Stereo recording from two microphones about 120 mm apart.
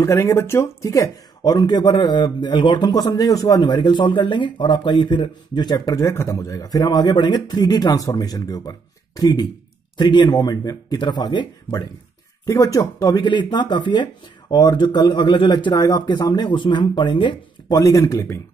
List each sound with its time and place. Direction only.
0.0 s speech: 25° left (ahead or behind)
5.9 s speech: 25° left (ahead or behind)
12.4 s speech: 25° left (ahead or behind)